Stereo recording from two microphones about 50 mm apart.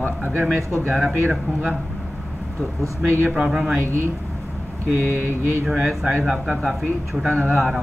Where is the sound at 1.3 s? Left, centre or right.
Right.